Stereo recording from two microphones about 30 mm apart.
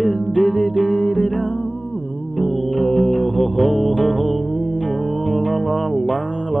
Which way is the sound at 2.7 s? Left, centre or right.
Left.